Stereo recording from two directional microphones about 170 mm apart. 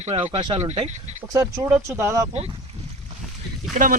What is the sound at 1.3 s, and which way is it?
Speech, 20° right (ahead or behind).